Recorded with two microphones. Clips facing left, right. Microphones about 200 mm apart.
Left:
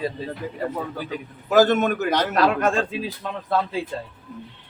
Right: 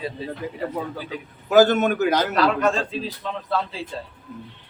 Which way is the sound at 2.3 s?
50° left (ahead or behind).